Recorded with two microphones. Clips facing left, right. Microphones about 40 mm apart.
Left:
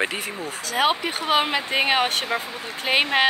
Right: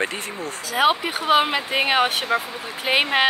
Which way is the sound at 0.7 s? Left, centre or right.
Centre.